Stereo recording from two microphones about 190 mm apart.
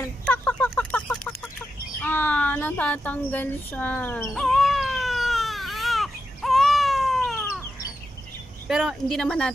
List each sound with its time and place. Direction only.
0.2 s chicken: 5° left (ahead or behind)
2.0 s speech: 10° left (ahead or behind)
4.3 s baby cry: centre (ahead or behind)
8.6 s speech: centre (ahead or behind)